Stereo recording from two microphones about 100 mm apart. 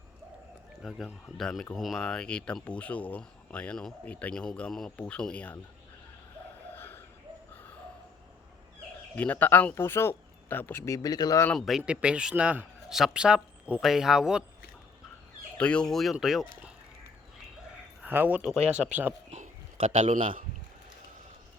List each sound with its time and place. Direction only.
0.8 s speech: centre (ahead or behind)
6.7 s a sound: 20° left (ahead or behind)
9.1 s speech: 15° left (ahead or behind)
10.8 s speech: 35° left (ahead or behind)
11.5 s speech: centre (ahead or behind)
11.9 s speech: 10° right (ahead or behind)
15.5 s speech: 10° left (ahead or behind)
18.0 s speech: 20° right (ahead or behind)
18.4 s speech: 5° right (ahead or behind)
19.7 s a man's voice: 65° right (ahead or behind)